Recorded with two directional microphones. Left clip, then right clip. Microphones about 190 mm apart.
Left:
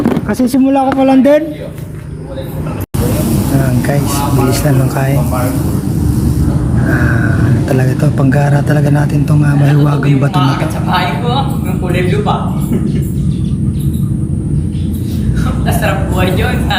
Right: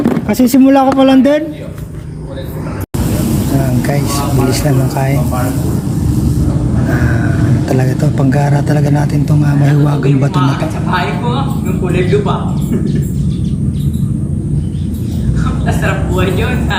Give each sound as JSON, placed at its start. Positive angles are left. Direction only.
{"t": 0.3, "sound": "speech", "side_deg": -30}
{"t": 0.9, "sound": "speech", "side_deg": -15}
{"t": 1.2, "sound": "speech", "side_deg": 0}
{"t": 3.6, "sound": "speech", "side_deg": 0}
{"t": 6.8, "sound": "speech", "side_deg": 0}